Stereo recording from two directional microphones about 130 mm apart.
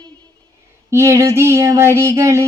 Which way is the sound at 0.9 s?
20° right (ahead or behind).